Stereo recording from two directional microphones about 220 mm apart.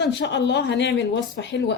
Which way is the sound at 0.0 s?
55° left (ahead or behind).